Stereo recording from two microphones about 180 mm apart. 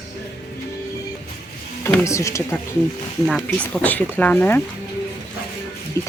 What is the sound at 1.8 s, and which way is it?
Speech, 15° left (ahead or behind).